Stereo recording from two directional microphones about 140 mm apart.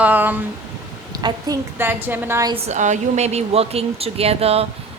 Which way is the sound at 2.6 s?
60° right (ahead or behind).